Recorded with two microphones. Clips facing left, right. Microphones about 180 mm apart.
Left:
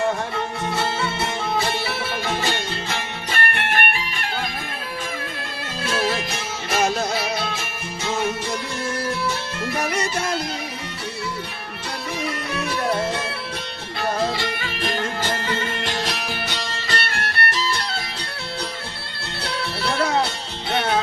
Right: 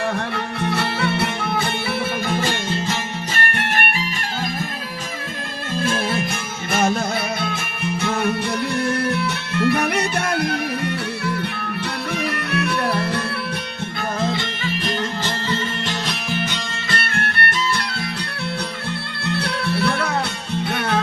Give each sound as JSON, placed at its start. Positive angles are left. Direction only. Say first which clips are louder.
{"t": 0.3, "sound": "music", "louder": "right 2 dB", "side_deg": -65}
{"t": 5.8, "sound": "music", "louder": "right 1 dB", "side_deg": -50}
{"t": 12.1, "sound": "music", "louder": "right 3 dB", "side_deg": -65}
{"t": 14.0, "sound": "music", "louder": "left 1 dB", "side_deg": 45}
{"t": 17.2, "sound": "music", "louder": "right 2 dB", "side_deg": -55}
{"t": 17.6, "sound": "music", "louder": "right 4 dB", "side_deg": 30}